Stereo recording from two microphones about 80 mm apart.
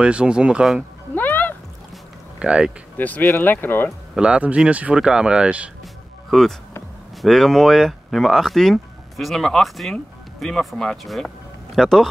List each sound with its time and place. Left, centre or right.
0.0 s speech: centre
1.1 s music: left
2.3 s speech: centre
3.0 s speech: left
4.1 s speech: centre
6.3 s speech: centre